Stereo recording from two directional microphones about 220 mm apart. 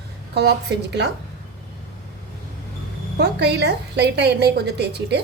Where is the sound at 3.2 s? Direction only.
50° right (ahead or behind).